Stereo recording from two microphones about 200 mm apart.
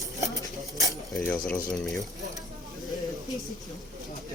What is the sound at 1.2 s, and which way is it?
Speech, 10° left (ahead or behind).